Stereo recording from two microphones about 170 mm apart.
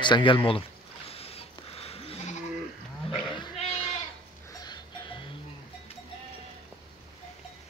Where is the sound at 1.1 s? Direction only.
35° left (ahead or behind).